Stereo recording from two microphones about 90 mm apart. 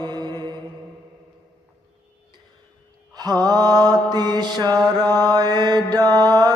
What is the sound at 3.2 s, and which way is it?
Mantra, 50° right (ahead or behind).